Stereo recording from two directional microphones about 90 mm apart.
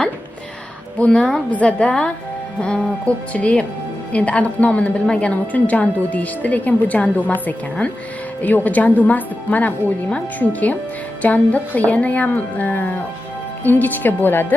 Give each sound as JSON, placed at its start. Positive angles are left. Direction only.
{"t": 1.0, "sound": "a woman's voice", "side_deg": 10}